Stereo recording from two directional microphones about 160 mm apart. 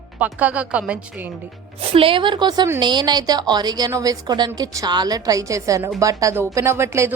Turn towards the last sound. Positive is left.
turn(degrees=-15)  # may be behind; listen again after turning